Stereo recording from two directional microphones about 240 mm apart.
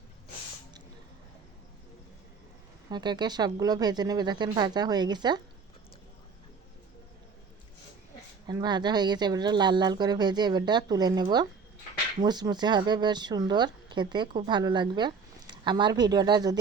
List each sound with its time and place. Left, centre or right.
2.9 s a woman's voice: centre
8.4 s a woman's voice: centre